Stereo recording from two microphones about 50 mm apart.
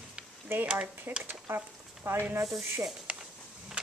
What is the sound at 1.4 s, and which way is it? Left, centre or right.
Frying, right.